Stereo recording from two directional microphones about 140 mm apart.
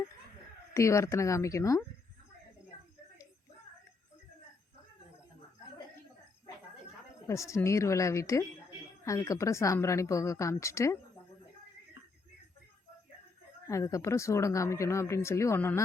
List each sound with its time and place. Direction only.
0.7 s speech: 20° left (ahead or behind)
7.3 s speech: 20° left (ahead or behind)
13.7 s speech: 20° left (ahead or behind)